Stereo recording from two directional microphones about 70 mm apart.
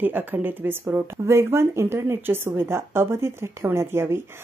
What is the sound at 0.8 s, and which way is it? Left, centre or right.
A woman's voice, right.